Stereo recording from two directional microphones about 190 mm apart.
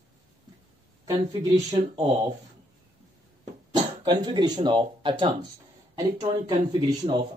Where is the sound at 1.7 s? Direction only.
30° right (ahead or behind).